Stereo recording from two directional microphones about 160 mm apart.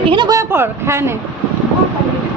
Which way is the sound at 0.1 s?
25° right (ahead or behind).